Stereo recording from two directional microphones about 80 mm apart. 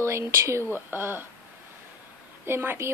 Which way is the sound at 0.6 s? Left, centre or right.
Right.